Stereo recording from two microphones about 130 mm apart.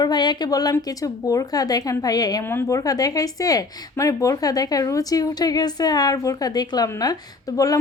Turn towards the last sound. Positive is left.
turn(degrees=25)  # may be behind; listen again after turning